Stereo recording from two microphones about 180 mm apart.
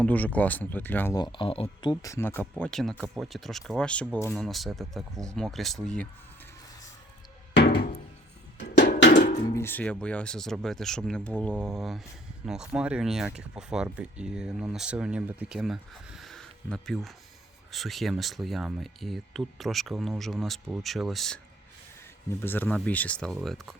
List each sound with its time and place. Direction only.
0.0 s speech: 10° left (ahead or behind)
1.1 s speech: 25° left (ahead or behind); by 5.9 s centre (ahead or behind)
7.5 s music: 70° left (ahead or behind)
8.8 s a sound: 65° left (ahead or behind)
9.6 s speech: 10° left (ahead or behind)
22.3 s speech: 10° left (ahead or behind)